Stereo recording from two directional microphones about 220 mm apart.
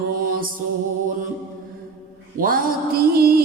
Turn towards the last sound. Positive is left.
turn(degrees=-45)  # may be behind; listen again after turning